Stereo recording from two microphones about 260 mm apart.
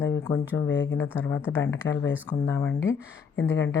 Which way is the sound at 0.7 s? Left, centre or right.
Left.